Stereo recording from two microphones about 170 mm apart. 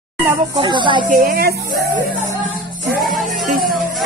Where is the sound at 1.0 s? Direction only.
55° right (ahead or behind).